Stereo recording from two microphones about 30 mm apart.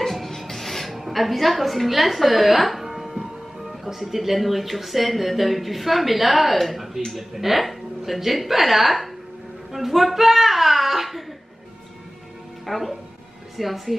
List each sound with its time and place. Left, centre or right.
0.0 s music: centre
3.6 s a child's voice: centre
12.6 s a woman's voice: centre